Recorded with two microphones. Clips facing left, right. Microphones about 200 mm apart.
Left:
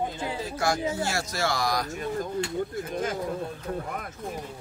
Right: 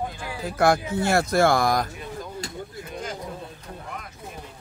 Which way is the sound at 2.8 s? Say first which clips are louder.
Left 4 dB; 50° left (ahead or behind).